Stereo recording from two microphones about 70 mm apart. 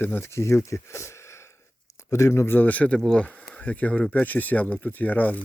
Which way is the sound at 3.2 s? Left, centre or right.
Left.